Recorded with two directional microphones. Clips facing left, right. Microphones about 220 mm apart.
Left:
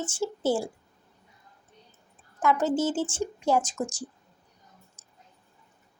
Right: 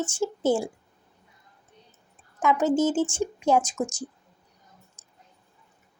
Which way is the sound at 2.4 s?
15° right (ahead or behind).